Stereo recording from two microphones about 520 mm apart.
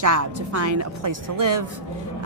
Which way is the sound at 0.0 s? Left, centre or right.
Right.